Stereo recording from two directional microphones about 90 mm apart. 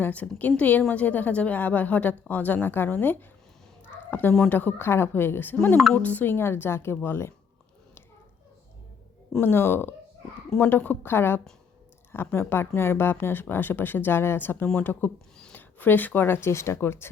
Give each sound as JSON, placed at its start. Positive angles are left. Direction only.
{"t": 0.0, "sound": "a woman's voice", "side_deg": 20}
{"t": 9.4, "sound": "a woman's voice", "side_deg": 25}